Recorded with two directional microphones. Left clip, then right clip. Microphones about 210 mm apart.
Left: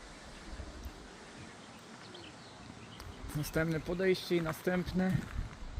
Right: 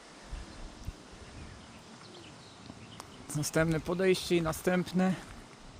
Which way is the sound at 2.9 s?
20° right (ahead or behind).